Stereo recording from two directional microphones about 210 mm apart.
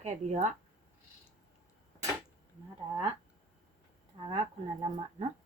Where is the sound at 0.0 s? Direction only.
30° right (ahead or behind).